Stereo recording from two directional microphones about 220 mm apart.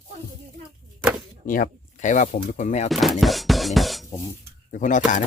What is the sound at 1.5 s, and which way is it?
Speech, 40° left (ahead or behind).